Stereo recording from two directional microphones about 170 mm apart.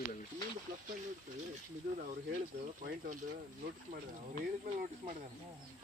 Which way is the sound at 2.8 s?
55° right (ahead or behind).